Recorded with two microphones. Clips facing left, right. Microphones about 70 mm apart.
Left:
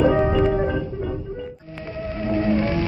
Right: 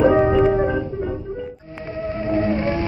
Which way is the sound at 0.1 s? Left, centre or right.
Centre.